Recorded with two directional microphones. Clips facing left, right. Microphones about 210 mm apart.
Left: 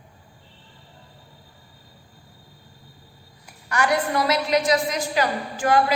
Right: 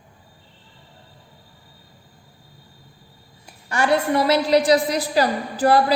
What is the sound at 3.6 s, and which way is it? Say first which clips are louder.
A woman's voice: right 3 dB; 25° right (ahead or behind).